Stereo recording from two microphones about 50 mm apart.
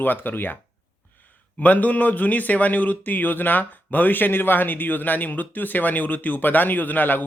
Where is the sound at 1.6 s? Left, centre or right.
Left.